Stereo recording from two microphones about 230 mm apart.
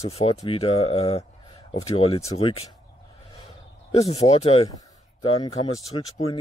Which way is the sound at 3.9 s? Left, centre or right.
Left.